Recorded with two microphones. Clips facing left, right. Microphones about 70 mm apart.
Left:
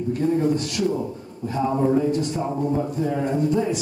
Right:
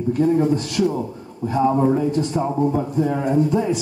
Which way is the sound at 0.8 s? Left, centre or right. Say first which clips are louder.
Right 4 dB; centre.